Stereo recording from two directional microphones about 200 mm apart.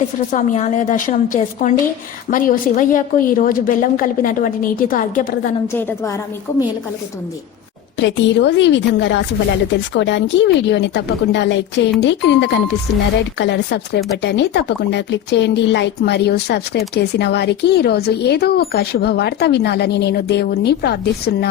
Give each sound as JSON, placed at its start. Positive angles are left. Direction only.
{"t": 0.3, "sound": "a woman's voice", "side_deg": 40}
{"t": 7.9, "sound": "speech", "side_deg": 65}